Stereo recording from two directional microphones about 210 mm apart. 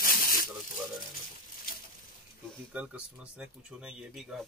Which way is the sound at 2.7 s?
5° right (ahead or behind).